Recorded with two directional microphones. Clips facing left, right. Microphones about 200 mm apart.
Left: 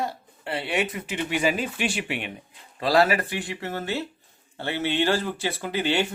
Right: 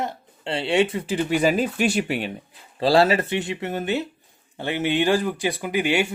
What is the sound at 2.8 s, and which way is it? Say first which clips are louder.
Speech: right 3 dB; 30° right (ahead or behind).